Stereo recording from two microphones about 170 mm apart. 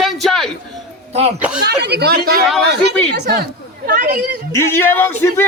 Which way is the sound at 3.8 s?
55° right (ahead or behind).